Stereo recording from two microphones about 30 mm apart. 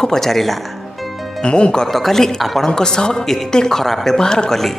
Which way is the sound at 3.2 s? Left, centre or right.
Centre.